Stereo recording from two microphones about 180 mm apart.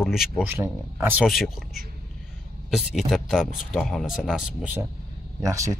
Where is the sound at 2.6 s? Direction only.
Centre (ahead or behind).